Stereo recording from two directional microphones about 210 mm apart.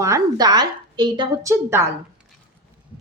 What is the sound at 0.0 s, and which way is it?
A woman's voice, 15° right (ahead or behind).